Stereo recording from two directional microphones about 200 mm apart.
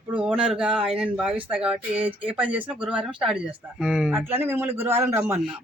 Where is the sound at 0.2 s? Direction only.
5° right (ahead or behind).